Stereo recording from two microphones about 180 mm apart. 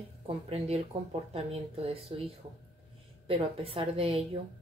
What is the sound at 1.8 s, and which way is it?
A woman's voice, 30° right (ahead or behind).